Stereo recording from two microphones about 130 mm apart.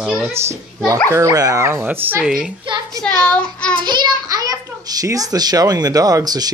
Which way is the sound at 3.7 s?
35° right (ahead or behind).